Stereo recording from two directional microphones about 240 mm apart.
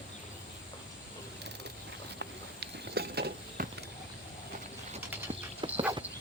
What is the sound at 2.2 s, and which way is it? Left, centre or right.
Clip-clop, right.